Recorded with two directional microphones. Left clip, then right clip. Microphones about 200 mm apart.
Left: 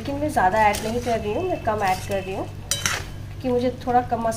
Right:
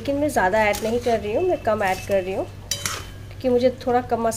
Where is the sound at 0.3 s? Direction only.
55° right (ahead or behind).